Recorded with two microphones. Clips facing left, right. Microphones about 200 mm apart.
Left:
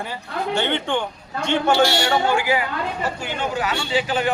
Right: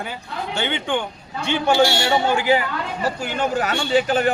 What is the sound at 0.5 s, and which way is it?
A man's voice, 5° right (ahead or behind).